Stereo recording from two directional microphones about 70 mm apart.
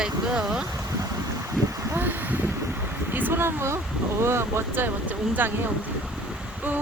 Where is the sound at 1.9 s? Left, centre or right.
Right.